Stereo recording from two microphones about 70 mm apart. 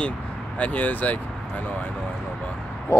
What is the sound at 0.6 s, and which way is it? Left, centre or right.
Speech, left.